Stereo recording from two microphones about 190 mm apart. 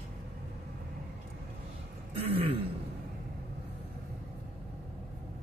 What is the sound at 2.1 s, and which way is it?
Throat clearing, 30° right (ahead or behind).